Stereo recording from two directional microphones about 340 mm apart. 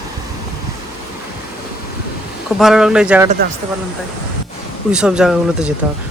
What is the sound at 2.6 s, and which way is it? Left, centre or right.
Speech, centre.